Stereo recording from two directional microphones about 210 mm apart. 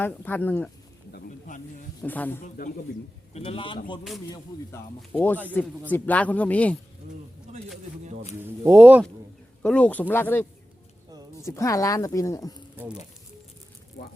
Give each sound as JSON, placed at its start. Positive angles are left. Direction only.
{"t": 0.0, "sound": "speech", "side_deg": 10}
{"t": 1.1, "sound": "a sound", "side_deg": 40}
{"t": 2.0, "sound": "speech", "side_deg": 10}
{"t": 3.3, "sound": "a man's voice", "side_deg": 25}
{"t": 5.1, "sound": "speech", "side_deg": 10}
{"t": 8.4, "sound": "speech", "side_deg": -10}
{"t": 9.6, "sound": "speech", "side_deg": 5}
{"t": 11.1, "sound": "a sound", "side_deg": -15}
{"t": 11.4, "sound": "speech", "side_deg": 15}